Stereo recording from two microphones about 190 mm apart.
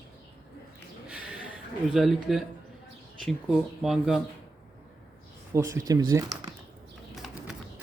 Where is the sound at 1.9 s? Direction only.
Centre (ahead or behind).